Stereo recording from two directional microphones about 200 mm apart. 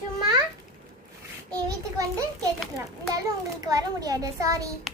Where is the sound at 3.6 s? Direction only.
20° right (ahead or behind).